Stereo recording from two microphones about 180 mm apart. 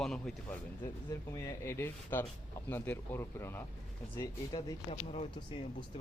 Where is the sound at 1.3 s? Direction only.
15° left (ahead or behind).